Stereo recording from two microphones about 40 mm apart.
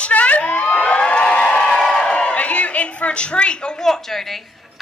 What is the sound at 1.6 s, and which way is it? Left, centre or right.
A woman's voice, centre.